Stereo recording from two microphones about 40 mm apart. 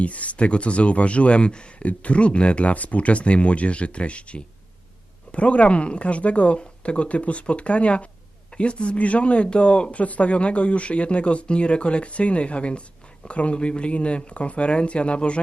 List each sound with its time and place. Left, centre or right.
0.0 s speech: left